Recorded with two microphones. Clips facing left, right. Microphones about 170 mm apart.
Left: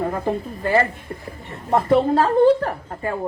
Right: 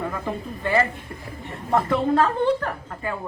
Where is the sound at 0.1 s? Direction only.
35° left (ahead or behind).